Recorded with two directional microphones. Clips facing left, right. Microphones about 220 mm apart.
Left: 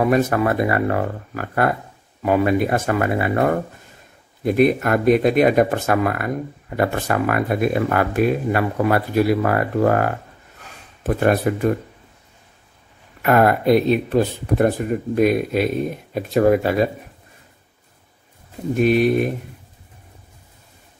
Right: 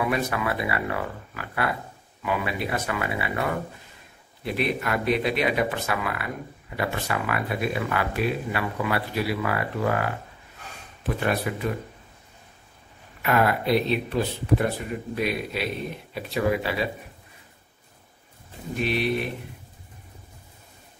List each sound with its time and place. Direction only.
0.0 s speech: 45° left (ahead or behind)
13.2 s speech: 50° left (ahead or behind)
18.8 s speech: 45° left (ahead or behind)